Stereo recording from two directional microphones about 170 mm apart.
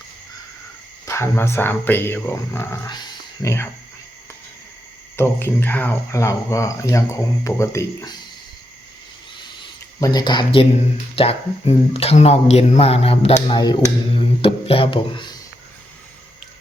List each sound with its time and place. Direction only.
1.0 s speech: 15° left (ahead or behind)
5.1 s speech: 15° left (ahead or behind)
10.0 s speech: 25° left (ahead or behind)